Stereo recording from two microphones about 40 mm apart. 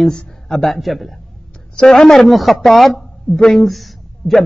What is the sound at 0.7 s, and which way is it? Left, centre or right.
Speech, centre.